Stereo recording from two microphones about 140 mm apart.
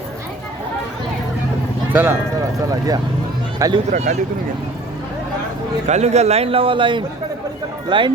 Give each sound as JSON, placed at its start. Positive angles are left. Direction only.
{"t": 1.9, "sound": "speech", "side_deg": -15}
{"t": 2.6, "sound": "speech", "side_deg": -25}
{"t": 3.9, "sound": "a man's voice", "side_deg": -55}
{"t": 5.9, "sound": "a man's voice", "side_deg": -50}